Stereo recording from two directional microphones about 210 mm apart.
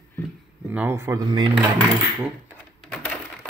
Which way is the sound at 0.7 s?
10° right (ahead or behind).